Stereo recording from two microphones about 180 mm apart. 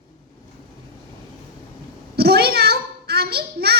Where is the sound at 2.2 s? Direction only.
60° right (ahead or behind).